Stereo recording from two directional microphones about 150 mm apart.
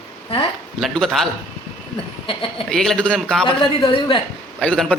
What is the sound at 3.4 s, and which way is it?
Speech, 35° left (ahead or behind).